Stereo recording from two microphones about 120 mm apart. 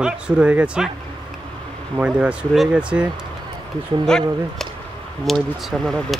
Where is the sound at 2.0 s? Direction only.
10° right (ahead or behind).